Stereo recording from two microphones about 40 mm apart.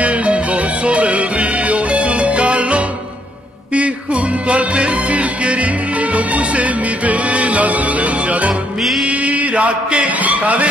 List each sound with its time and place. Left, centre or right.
0.0 s music: right